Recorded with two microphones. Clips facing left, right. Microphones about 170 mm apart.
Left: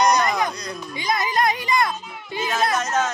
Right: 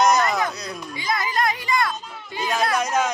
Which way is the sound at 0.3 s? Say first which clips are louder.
Left 1 dB; 15° left (ahead or behind).